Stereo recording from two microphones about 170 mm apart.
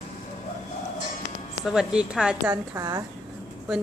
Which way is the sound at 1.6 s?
5° right (ahead or behind).